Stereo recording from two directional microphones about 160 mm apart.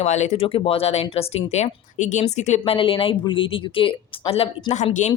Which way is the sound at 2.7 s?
35° left (ahead or behind).